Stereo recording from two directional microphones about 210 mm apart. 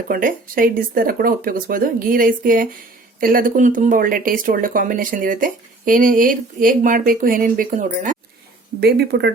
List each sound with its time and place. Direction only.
0.1 s speech: 40° right (ahead or behind)
8.8 s speech: 50° right (ahead or behind)